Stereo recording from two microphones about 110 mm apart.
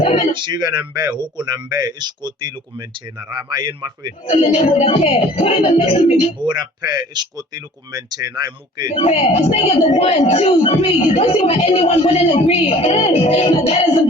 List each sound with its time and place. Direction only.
0.3 s speech: 45° right (ahead or behind)
4.3 s speech: 70° left (ahead or behind)
6.4 s speech: 40° right (ahead or behind)
9.0 s a woman's voice: 65° left (ahead or behind)